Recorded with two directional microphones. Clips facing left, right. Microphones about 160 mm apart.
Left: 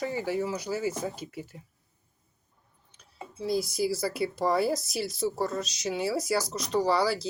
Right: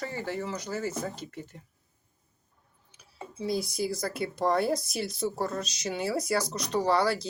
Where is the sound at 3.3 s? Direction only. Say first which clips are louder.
Left 2 dB; centre (ahead or behind).